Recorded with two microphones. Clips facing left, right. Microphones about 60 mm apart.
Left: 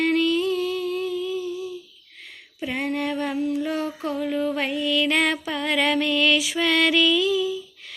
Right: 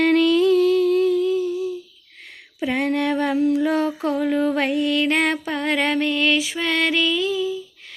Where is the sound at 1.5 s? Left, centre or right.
Right.